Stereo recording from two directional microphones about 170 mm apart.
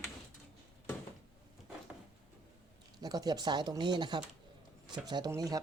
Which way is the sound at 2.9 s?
20° right (ahead or behind).